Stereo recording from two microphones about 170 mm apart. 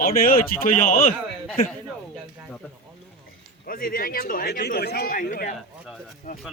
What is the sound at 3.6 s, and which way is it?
Speech, 55° left (ahead or behind).